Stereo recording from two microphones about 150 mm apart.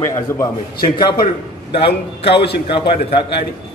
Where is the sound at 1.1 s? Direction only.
90° left.